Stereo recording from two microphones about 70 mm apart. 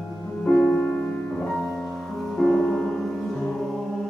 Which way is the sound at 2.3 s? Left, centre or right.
Centre.